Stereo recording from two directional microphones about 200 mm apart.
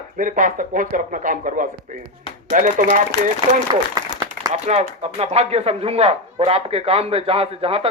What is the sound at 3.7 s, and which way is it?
Applause, 20° right (ahead or behind).